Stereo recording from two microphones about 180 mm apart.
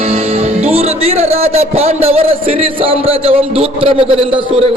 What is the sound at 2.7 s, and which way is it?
A man's voice, 30° right (ahead or behind).